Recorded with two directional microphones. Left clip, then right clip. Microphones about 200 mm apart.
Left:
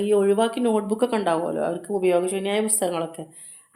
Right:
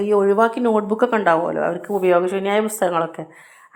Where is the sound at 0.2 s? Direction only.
10° right (ahead or behind).